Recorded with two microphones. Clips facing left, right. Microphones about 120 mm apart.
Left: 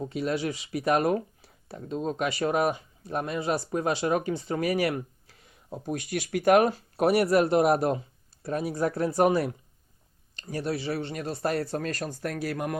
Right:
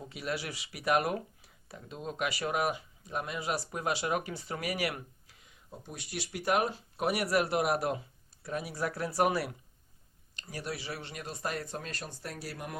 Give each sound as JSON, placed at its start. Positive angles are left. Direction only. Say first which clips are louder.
{"t": 0.0, "sound": "speech", "louder": "left 8 dB", "side_deg": 30}
{"t": 5.8, "sound": "speech", "louder": "left 10 dB", "side_deg": 55}
{"t": 6.7, "sound": "speech", "louder": "left 8 dB", "side_deg": 45}
{"t": 7.1, "sound": "speech", "louder": "left 7 dB", "side_deg": 30}
{"t": 10.5, "sound": "speech", "louder": "left 9 dB", "side_deg": 30}
{"t": 12.3, "sound": "speech", "louder": "left 11 dB", "side_deg": 65}